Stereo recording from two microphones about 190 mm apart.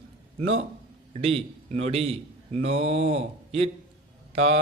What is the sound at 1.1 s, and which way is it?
Speech, 30° right (ahead or behind).